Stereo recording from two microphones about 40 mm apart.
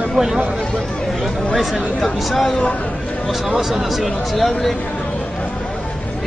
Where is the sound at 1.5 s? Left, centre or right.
Centre.